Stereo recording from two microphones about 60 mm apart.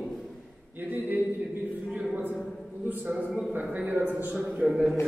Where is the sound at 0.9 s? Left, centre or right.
Right.